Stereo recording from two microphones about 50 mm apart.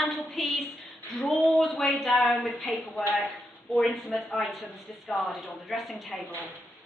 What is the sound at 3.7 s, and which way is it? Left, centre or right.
A woman's voice, centre.